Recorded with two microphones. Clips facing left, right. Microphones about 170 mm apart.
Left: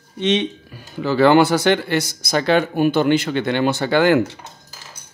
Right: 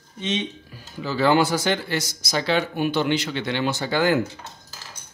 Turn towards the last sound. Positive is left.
turn(degrees=70)  # may be behind; listen again after turning